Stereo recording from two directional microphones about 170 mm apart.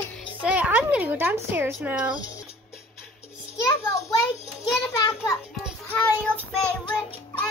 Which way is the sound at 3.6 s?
20° left (ahead or behind).